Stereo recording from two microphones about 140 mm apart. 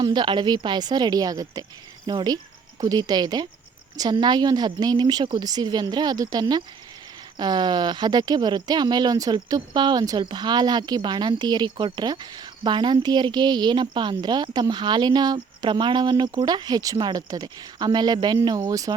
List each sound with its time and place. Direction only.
0.0 s speech: 30° right (ahead or behind)